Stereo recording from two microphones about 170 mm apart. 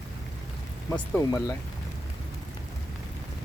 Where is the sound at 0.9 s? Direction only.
15° left (ahead or behind).